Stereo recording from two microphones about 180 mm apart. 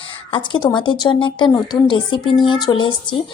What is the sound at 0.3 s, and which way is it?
Speech, 25° left (ahead or behind).